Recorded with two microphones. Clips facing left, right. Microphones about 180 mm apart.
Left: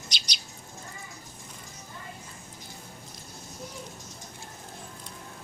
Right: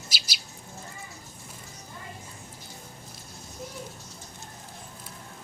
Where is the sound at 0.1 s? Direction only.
5° right (ahead or behind).